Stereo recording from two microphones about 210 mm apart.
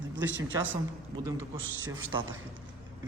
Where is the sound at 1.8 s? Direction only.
70° right (ahead or behind).